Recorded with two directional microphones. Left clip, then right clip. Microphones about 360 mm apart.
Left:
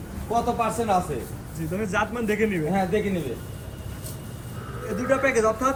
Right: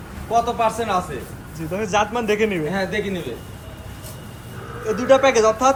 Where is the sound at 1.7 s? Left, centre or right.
Centre.